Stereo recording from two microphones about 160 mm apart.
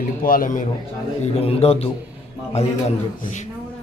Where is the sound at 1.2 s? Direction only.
40° left (ahead or behind).